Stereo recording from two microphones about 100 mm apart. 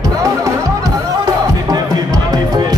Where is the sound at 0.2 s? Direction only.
35° right (ahead or behind).